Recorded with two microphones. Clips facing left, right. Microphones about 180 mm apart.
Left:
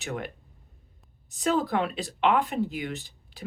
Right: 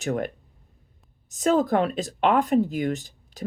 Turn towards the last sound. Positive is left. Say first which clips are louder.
# right 8 dB
turn(degrees=-45)  # may be behind; listen again after turning